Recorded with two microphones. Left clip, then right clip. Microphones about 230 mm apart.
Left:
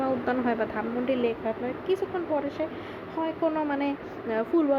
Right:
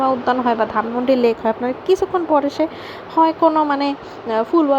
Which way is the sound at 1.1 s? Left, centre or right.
Right.